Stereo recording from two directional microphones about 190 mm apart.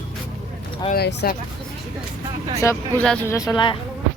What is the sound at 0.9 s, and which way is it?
Speech, 55° left (ahead or behind).